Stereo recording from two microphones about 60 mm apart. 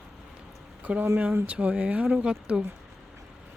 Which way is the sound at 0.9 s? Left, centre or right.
Right.